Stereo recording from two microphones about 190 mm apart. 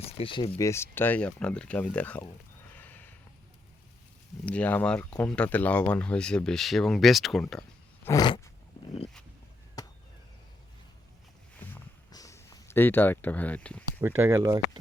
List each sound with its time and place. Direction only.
0.2 s speech: 30° left (ahead or behind)
0.6 s speech: 15° left (ahead or behind)
4.4 s speech: 10° left (ahead or behind)
8.0 s a sound: 20° left (ahead or behind)
9.8 s chop: 20° left (ahead or behind)
11.6 s a sound: 15° left (ahead or behind)
14.2 s speech: 15° right (ahead or behind)